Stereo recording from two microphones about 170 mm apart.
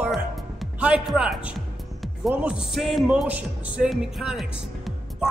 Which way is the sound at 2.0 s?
5° right (ahead or behind).